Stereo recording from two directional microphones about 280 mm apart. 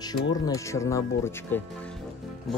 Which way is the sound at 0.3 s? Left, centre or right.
Centre.